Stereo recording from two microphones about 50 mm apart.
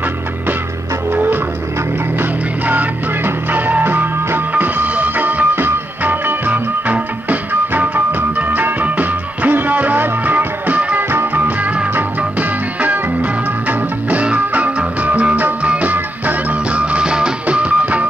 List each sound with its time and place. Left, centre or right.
1.1 s music: right
2.6 s music: right
11.0 s music: right
14.2 s music: right